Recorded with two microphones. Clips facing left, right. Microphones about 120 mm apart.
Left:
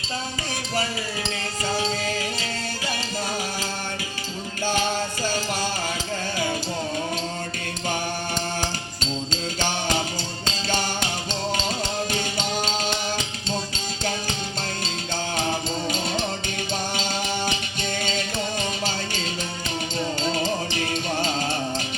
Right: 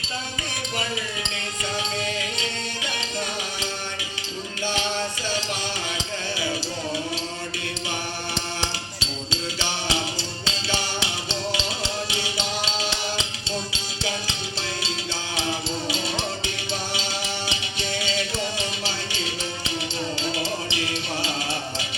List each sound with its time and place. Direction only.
1.7 s music: 35° left (ahead or behind)
4.6 s music: 45° left (ahead or behind)
9.0 s music: 45° left (ahead or behind)
12.1 s music: 45° left (ahead or behind)
15.4 s music: 45° left (ahead or behind)
20.3 s music: 45° left (ahead or behind)